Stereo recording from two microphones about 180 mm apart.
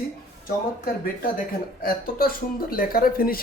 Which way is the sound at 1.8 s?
55° left (ahead or behind).